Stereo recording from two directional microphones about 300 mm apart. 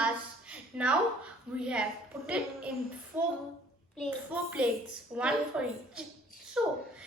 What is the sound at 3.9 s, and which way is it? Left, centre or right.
A woman's voice, centre.